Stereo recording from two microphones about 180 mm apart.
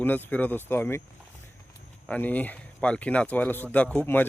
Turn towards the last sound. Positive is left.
turn(degrees=10)  # may be behind; listen again after turning